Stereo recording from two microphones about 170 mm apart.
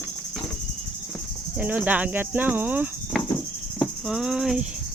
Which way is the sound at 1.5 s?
10° right (ahead or behind).